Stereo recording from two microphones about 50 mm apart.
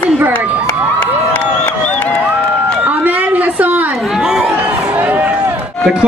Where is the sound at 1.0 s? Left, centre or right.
Left.